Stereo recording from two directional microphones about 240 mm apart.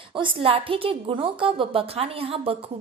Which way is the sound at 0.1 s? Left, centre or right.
Right.